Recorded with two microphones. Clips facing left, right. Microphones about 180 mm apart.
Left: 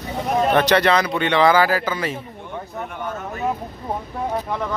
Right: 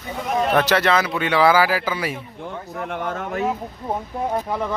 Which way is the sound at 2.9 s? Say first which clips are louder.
Right 5 dB; 90° right.